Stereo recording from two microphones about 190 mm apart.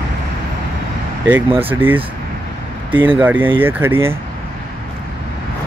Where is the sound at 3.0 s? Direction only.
10° right (ahead or behind).